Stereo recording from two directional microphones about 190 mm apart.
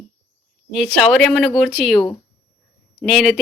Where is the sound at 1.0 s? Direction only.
Centre (ahead or behind).